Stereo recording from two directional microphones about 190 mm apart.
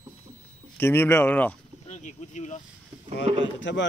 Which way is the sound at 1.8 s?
40° left (ahead or behind).